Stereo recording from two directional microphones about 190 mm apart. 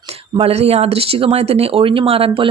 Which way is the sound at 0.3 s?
30° right (ahead or behind).